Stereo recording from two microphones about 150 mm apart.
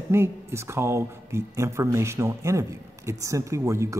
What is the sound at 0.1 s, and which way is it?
Speech, 15° right (ahead or behind).